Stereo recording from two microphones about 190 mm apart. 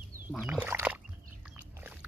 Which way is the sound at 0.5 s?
15° right (ahead or behind).